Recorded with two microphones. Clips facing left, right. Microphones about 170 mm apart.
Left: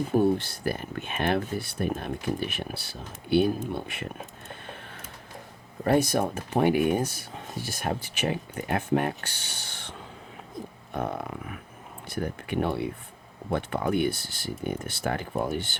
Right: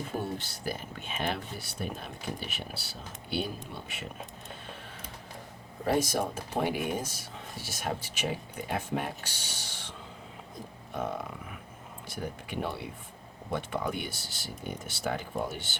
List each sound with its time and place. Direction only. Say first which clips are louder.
0.2 s speech: left 12 dB; 55° left (ahead or behind)
5.8 s speech: left 5 dB; 60° left (ahead or behind)
10.9 s a sound: left 3 dB; 60° left (ahead or behind)
12.0 s speech: left 6 dB; 60° left (ahead or behind)